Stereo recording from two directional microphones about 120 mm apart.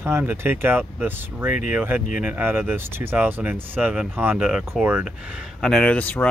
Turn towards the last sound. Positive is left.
turn(degrees=15)  # may be behind; listen again after turning